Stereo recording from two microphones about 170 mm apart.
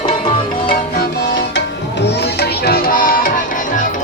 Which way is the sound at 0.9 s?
90° left.